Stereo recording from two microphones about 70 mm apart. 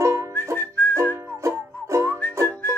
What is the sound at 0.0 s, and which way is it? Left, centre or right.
Whistling, right.